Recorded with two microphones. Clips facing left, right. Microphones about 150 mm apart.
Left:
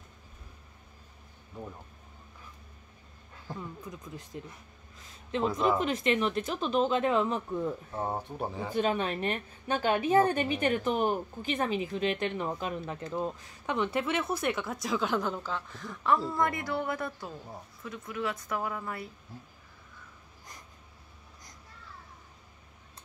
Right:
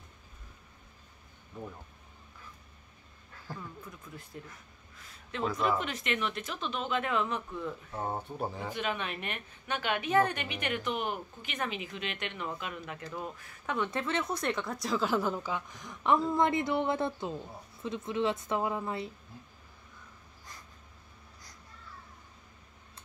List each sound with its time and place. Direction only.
3.4 s speech: 20° left (ahead or behind)
5.7 s a woman's voice: 35° left (ahead or behind)
8.1 s speech: centre (ahead or behind)
8.7 s a woman's voice: 35° left (ahead or behind); by 19.0 s 20° right (ahead or behind)